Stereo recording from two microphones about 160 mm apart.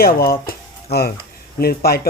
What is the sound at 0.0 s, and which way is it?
Speech, 70° left (ahead or behind).